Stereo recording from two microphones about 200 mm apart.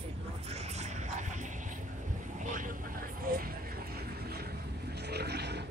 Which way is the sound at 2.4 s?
40° right (ahead or behind).